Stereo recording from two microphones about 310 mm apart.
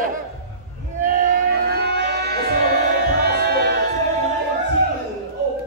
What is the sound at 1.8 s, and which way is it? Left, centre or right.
Music, right.